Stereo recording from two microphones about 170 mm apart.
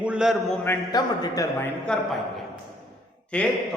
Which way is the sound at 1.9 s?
5° left (ahead or behind).